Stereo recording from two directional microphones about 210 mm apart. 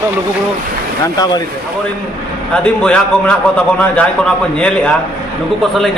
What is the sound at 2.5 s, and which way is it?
A man's voice, 5° left (ahead or behind).